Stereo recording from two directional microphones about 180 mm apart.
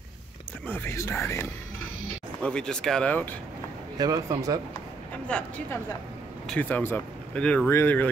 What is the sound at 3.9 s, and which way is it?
Speech, 20° right (ahead or behind).